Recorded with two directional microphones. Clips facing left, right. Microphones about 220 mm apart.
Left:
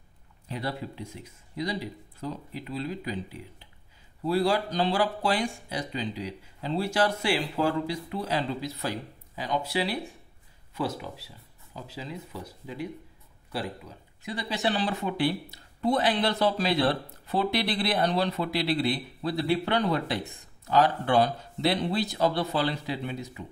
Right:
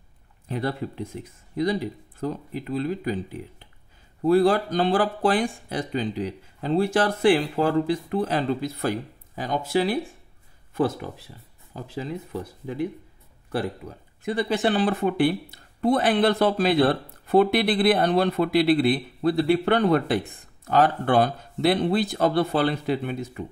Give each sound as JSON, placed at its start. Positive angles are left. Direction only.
{"t": 0.5, "sound": "speech", "side_deg": -50}